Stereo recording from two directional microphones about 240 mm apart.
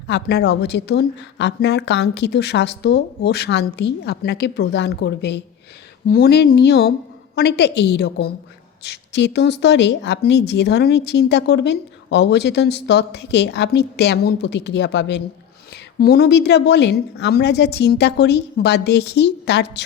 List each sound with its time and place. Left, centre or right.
0.1 s a woman's voice: left